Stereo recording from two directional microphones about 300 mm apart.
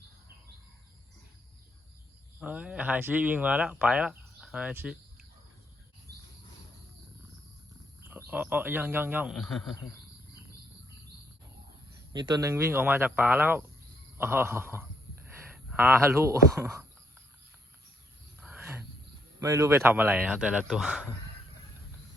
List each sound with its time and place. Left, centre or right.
2.4 s speech: centre
8.3 s speech: centre
12.1 s speech: centre
18.3 s wild animals: centre
19.4 s speech: centre